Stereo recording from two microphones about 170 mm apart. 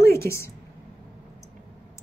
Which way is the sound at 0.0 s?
15° left (ahead or behind).